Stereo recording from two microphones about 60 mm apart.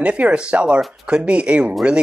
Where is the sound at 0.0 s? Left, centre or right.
Centre.